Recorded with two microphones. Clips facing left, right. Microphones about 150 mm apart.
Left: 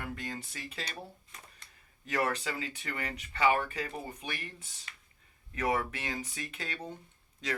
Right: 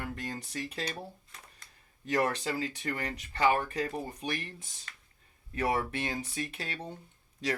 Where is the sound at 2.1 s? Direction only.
35° right (ahead or behind).